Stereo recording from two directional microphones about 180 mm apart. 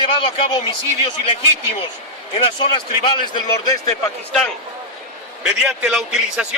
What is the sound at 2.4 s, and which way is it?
A man's voice, 30° left (ahead or behind).